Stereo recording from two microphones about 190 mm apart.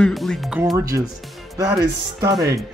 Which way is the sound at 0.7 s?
15° right (ahead or behind).